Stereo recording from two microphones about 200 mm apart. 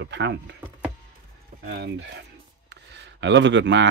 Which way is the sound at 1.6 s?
60° right (ahead or behind).